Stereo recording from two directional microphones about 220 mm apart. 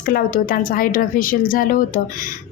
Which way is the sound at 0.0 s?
40° left (ahead or behind).